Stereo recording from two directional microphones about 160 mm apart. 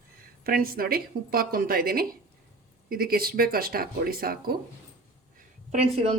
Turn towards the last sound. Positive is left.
turn(degrees=-35)  # may be behind; listen again after turning